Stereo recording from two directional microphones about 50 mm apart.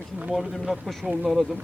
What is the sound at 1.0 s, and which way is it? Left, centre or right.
Speech, right.